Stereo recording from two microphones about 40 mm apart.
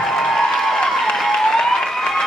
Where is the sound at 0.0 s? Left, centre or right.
Centre.